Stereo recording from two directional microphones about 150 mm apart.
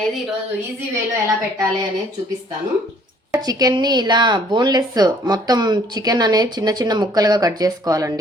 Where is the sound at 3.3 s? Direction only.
25° right (ahead or behind).